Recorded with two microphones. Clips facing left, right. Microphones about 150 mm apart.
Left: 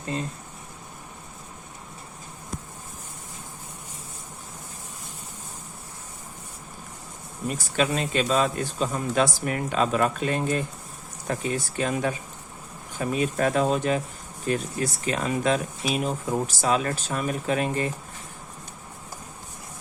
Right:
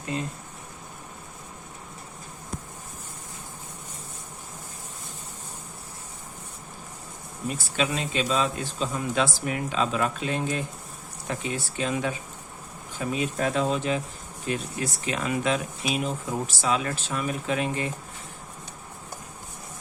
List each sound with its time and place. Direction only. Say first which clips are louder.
7.5 s a man's voice: left 3 dB; 45° left (ahead or behind)